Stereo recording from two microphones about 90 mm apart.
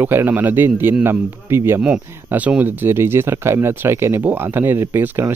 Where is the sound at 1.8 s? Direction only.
15° right (ahead or behind).